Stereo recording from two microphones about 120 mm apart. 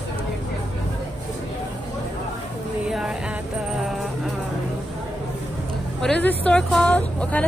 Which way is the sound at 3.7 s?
5° right (ahead or behind).